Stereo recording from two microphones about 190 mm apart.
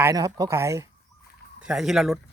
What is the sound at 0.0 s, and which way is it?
Speech, 20° right (ahead or behind).